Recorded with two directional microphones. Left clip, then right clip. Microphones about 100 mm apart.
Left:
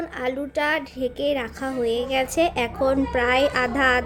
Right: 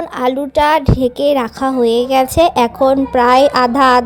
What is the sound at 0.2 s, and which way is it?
A woman's voice, 85° right.